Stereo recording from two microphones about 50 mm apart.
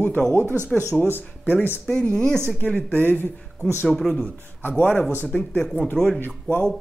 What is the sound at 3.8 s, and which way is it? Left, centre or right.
Speech, centre.